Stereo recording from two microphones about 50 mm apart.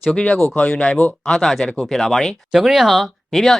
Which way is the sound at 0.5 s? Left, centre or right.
Left.